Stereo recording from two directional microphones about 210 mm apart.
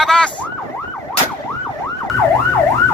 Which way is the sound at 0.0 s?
5° left (ahead or behind).